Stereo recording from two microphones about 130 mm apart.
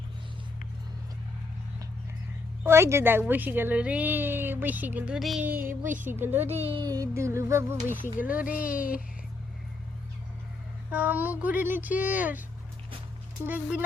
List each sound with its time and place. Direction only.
2.6 s a woman's voice: 20° right (ahead or behind); by 5.5 s 5° right (ahead or behind)
5.5 s a woman's voice: 15° right (ahead or behind)
6.6 s speech: 45° right (ahead or behind)
6.8 s a woman's voice: 25° right (ahead or behind); by 8.8 s 10° right (ahead or behind)
10.9 s a woman's voice: 15° right (ahead or behind)
13.4 s a woman's voice: 15° right (ahead or behind)